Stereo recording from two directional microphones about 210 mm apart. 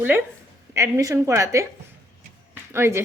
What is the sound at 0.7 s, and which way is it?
Speech, 15° right (ahead or behind).